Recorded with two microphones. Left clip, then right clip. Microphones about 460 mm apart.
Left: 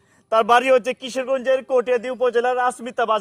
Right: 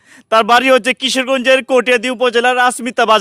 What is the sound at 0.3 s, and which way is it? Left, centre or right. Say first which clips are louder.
A man's voice: right 6 dB; right.